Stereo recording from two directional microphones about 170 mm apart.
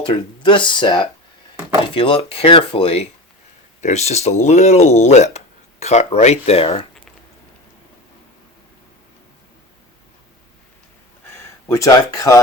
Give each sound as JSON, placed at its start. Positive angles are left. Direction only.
{"t": 0.0, "sound": "speech", "side_deg": 30}
{"t": 11.7, "sound": "speech", "side_deg": 20}